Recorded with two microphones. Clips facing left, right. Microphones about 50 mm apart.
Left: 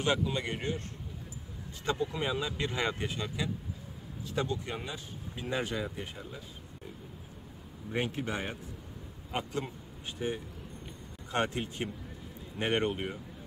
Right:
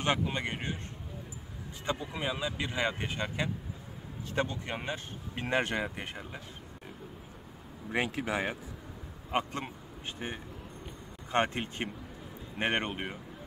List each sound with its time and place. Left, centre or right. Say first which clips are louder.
0.0 s speech: even; right
1.9 s speech: left 2 dB; centre
3.0 s speech: right 1 dB; right
4.9 s speech: right 3 dB; right
7.9 s speech: right 2 dB; right
9.3 s speech: right 2 dB; right